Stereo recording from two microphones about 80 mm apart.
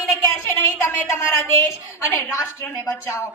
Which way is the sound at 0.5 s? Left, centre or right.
Left.